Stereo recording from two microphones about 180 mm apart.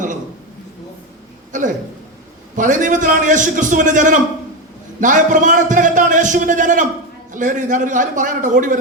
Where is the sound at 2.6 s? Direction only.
45° right (ahead or behind).